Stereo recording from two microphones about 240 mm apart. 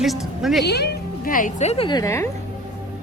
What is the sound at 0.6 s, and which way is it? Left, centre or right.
Speech, left.